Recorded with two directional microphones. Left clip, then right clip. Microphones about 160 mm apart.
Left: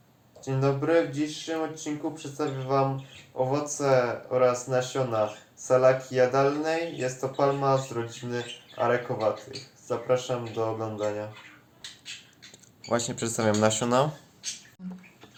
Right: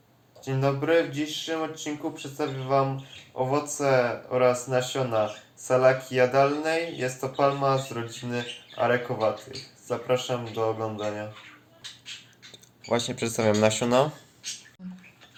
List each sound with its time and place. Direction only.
0.4 s speech: 30° right (ahead or behind)
12.8 s speech: 5° right (ahead or behind)
14.8 s a sound: 5° left (ahead or behind)